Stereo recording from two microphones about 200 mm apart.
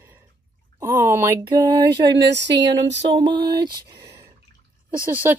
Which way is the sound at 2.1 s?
60° right (ahead or behind).